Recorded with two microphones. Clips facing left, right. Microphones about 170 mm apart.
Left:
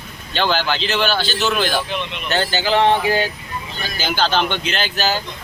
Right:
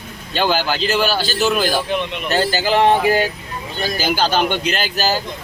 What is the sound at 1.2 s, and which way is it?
Speech, 40° right (ahead or behind).